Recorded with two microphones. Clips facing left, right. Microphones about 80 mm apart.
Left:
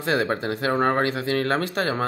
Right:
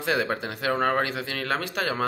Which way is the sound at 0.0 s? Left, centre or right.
Left.